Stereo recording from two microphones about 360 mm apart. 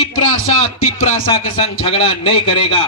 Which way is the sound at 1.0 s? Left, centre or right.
Centre.